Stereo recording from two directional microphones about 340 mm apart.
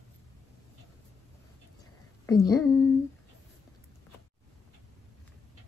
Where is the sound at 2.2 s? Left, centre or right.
Centre.